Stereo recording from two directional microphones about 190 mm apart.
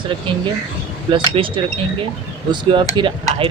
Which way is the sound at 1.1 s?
25° right (ahead or behind).